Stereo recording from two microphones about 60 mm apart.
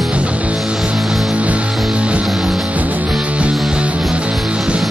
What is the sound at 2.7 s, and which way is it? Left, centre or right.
Music, right.